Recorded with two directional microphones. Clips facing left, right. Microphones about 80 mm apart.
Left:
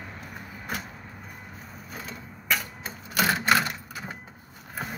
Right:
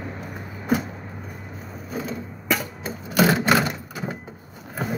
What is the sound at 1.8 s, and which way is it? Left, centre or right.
Sewing machine, centre.